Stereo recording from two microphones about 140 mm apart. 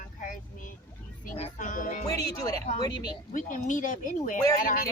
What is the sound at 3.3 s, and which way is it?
Speech, 65° left (ahead or behind).